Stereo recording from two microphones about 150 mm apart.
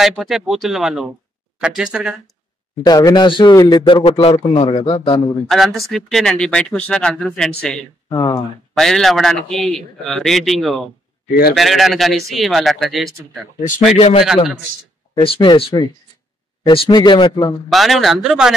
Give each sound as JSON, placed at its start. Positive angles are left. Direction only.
{"t": 0.0, "sound": "a man's voice", "side_deg": 0}
{"t": 2.8, "sound": "speech", "side_deg": 25}
{"t": 5.5, "sound": "a man's voice", "side_deg": 0}
{"t": 8.1, "sound": "speech", "side_deg": 25}
{"t": 8.7, "sound": "a man's voice", "side_deg": 5}
{"t": 13.9, "sound": "a man's voice", "side_deg": 45}
{"t": 17.6, "sound": "a man's voice", "side_deg": 0}